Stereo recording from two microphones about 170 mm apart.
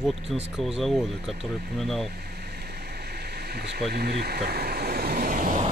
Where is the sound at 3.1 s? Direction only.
70° right (ahead or behind); by 5.6 s 55° right (ahead or behind).